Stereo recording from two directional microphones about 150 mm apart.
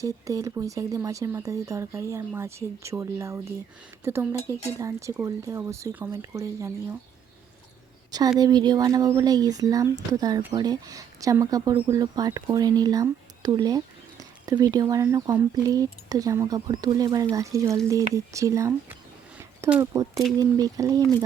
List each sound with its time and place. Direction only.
0.0 s speech: 20° right (ahead or behind)
8.4 s speech: 25° right (ahead or behind)